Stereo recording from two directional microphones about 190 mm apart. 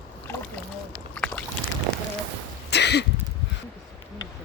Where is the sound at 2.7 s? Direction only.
60° left (ahead or behind).